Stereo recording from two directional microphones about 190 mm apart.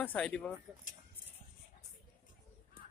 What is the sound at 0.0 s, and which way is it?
Speech, 10° left (ahead or behind).